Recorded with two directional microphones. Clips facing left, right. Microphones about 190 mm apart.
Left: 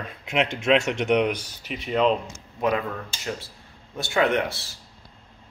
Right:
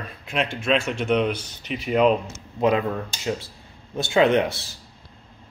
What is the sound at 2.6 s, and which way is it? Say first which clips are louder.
Speech: right 4 dB; 25° right (ahead or behind).